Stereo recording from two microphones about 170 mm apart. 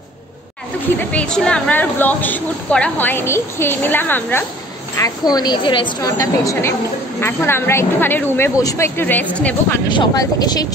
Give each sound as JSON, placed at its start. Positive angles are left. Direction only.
{"t": 0.9, "sound": "a woman's voice", "side_deg": 5}
{"t": 9.8, "sound": "a woman's voice", "side_deg": 25}